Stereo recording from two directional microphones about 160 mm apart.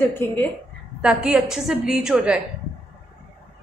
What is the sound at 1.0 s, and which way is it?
A woman's voice, 5° right (ahead or behind).